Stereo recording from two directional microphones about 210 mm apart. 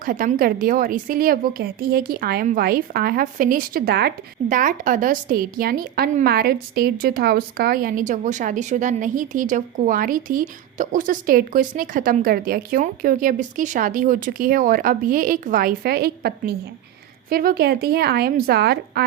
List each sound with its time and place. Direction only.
0.0 s a woman's voice: 40° right (ahead or behind)